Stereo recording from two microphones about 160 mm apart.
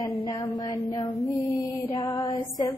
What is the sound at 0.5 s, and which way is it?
Child singing, 25° left (ahead or behind).